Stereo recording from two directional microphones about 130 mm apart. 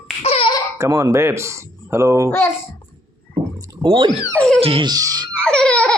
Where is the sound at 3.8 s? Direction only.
40° right (ahead or behind).